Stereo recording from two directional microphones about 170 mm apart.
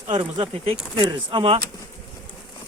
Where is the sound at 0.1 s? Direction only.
30° right (ahead or behind).